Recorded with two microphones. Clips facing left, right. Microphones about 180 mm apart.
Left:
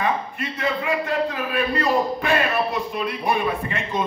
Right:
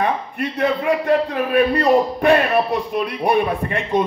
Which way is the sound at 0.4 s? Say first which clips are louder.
Right 6 dB; 65° right (ahead or behind).